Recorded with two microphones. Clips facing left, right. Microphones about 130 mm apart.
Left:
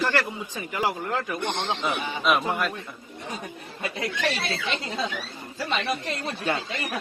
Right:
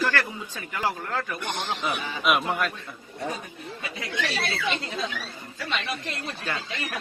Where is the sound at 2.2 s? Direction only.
Centre (ahead or behind).